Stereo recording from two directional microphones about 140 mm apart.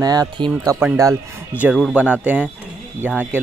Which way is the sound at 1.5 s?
10° right (ahead or behind).